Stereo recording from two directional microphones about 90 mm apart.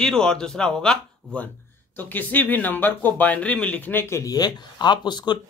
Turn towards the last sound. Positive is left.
turn(degrees=55)  # may be behind; listen again after turning